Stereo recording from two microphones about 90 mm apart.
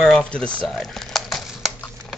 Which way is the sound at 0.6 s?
Centre (ahead or behind).